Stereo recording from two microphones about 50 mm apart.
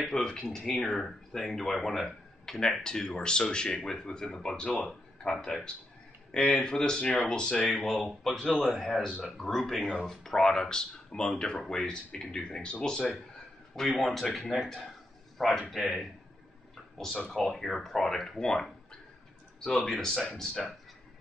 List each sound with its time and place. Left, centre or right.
0.0 s speech: centre
6.3 s speech: centre
13.7 s speech: centre
17.3 s speech: centre
19.8 s speech: centre